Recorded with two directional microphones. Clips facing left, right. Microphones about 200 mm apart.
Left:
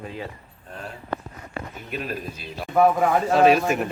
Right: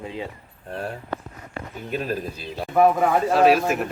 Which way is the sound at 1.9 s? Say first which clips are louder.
Right 4 dB; 40° right (ahead or behind).